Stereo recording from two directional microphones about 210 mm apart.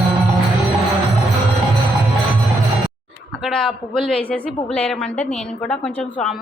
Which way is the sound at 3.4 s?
Centre (ahead or behind).